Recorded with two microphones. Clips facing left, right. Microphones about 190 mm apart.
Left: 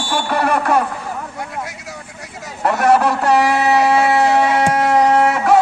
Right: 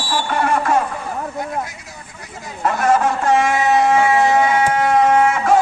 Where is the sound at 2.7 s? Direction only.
70° left (ahead or behind).